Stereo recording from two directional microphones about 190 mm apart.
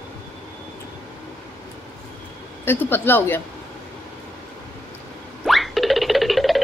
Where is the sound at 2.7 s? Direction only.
10° left (ahead or behind).